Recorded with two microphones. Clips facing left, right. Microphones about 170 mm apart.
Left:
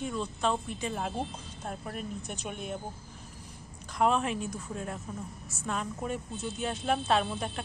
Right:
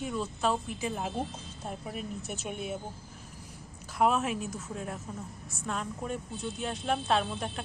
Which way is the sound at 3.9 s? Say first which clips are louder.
Even; 5° right (ahead or behind).